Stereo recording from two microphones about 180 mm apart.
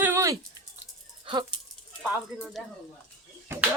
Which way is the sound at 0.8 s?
30° right (ahead or behind).